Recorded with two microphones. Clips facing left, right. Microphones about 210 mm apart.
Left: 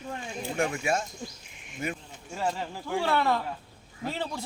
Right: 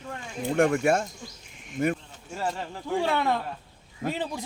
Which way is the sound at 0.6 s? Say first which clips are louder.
Right 6 dB; 55° right (ahead or behind).